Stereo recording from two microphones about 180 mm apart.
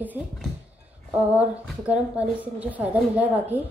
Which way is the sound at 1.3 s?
5° right (ahead or behind).